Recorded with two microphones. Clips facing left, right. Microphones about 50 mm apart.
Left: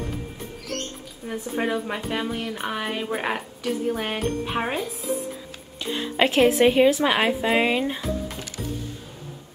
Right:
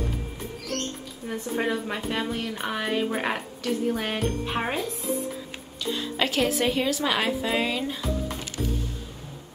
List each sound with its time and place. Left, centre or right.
1.2 s a woman's voice: centre
5.8 s speech: left